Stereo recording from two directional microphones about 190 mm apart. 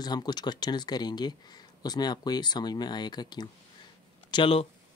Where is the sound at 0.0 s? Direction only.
20° left (ahead or behind).